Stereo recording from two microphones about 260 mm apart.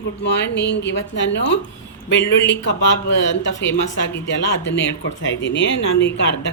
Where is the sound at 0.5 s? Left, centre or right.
Left.